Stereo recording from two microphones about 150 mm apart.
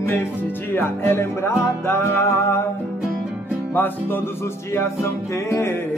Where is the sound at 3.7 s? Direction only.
15° left (ahead or behind).